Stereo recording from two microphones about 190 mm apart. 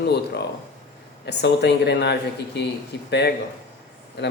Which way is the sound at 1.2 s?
65° left (ahead or behind).